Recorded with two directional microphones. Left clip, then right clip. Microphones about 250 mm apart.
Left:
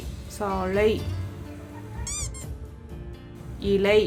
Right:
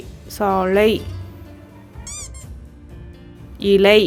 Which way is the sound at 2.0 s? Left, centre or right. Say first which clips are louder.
Even; centre.